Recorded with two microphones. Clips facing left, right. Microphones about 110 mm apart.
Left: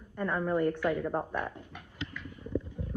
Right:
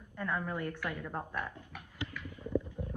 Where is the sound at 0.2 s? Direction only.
20° left (ahead or behind).